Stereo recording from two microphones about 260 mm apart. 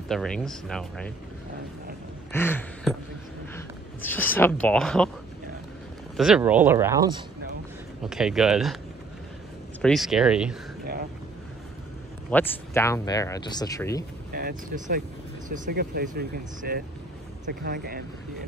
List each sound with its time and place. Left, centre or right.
0.1 s speech: centre
2.3 s a sound: centre
3.5 s speech: centre
6.1 s speech: centre
8.0 s speech: centre
9.8 s speech: centre
10.8 s vehicle: right
12.3 s speech: centre
14.3 s speech: right